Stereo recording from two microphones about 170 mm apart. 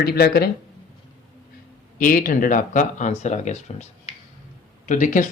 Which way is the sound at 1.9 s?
55° left (ahead or behind).